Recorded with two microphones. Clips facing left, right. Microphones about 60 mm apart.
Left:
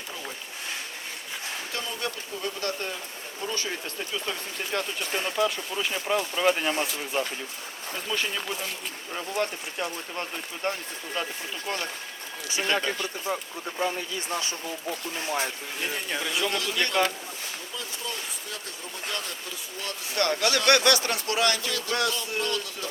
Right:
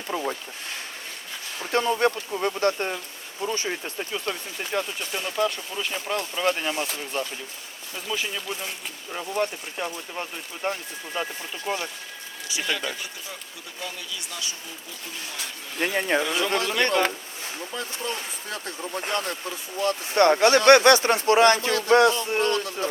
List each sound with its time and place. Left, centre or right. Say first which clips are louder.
1.7 s speech: right 13 dB; right
4.7 s speech: right 1 dB; centre
7.9 s speech: even; centre
12.5 s speech: left 2 dB; left
15.8 s speech: right 8 dB; right
16.2 s speech: right 3 dB; centre
16.5 s speech: right 5 dB; right